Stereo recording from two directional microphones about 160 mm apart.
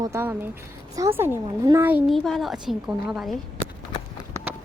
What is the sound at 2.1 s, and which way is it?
A woman's voice, centre (ahead or behind).